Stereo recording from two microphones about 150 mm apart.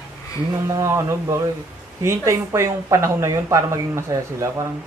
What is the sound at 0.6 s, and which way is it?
Speech, 20° right (ahead or behind).